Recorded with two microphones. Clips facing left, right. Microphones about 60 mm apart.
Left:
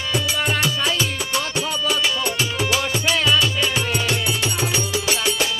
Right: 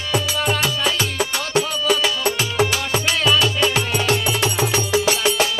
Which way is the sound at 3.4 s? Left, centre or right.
Right.